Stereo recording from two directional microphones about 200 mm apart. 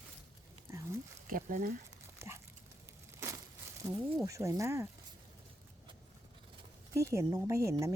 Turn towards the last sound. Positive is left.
turn(degrees=-15)  # may be behind; listen again after turning